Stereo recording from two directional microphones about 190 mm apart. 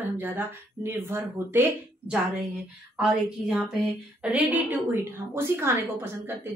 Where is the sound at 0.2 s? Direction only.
10° right (ahead or behind).